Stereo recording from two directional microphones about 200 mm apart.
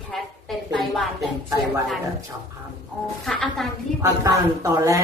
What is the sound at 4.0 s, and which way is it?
Speech, 15° right (ahead or behind).